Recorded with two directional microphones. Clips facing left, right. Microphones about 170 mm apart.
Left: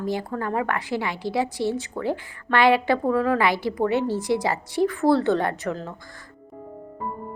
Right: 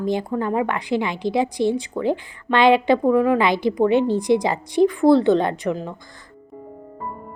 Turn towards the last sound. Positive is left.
turn(degrees=-15)  # may be behind; listen again after turning